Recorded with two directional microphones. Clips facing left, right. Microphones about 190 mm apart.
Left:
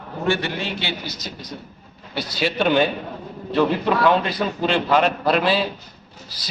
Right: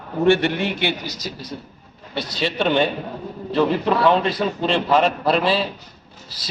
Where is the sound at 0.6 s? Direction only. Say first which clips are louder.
Right 5 dB; 55° right (ahead or behind).